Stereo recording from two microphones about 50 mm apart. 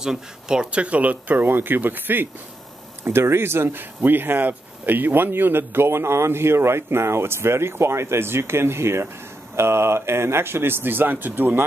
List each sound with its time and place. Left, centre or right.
0.0 s speech: centre; by 2.2 s right
3.0 s speech: right